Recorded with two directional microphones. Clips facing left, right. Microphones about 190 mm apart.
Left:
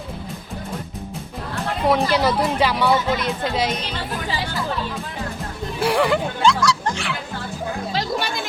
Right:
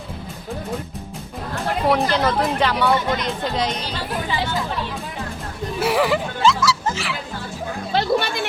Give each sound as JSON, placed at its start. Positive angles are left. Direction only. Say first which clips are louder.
{"t": 1.9, "sound": "speech", "louder": "left 1 dB", "side_deg": 10}
{"t": 5.8, "sound": "speech", "louder": "left 1 dB", "side_deg": -5}
{"t": 8.1, "sound": "a sound", "louder": "right 5 dB", "side_deg": 0}